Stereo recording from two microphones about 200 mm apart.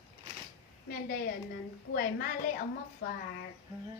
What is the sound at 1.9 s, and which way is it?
Speech, 50° left (ahead or behind).